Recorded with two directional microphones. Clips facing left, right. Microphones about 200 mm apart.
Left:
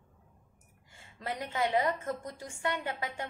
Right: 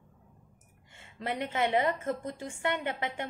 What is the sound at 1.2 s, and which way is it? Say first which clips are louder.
A woman's voice: right 2 dB; 25° right (ahead or behind).